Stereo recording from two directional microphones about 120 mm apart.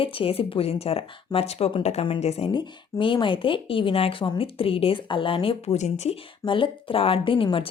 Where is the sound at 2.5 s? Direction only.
45° left (ahead or behind).